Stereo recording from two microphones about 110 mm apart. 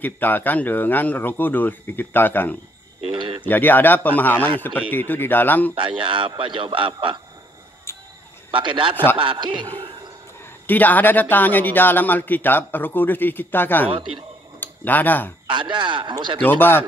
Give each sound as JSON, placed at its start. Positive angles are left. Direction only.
{"t": 0.0, "sound": "speech", "side_deg": 15}
{"t": 3.0, "sound": "a sound", "side_deg": -55}
{"t": 3.4, "sound": "speech", "side_deg": 15}
{"t": 5.8, "sound": "a man's voice", "side_deg": -50}
{"t": 7.9, "sound": "a sound", "side_deg": 20}
{"t": 8.5, "sound": "a man's voice", "side_deg": -50}
{"t": 10.7, "sound": "speech", "side_deg": 15}
{"t": 15.4, "sound": "a man's voice", "side_deg": -50}
{"t": 16.3, "sound": "speech", "side_deg": 20}